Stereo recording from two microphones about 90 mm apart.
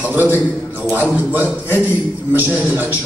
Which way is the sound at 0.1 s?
20° right (ahead or behind).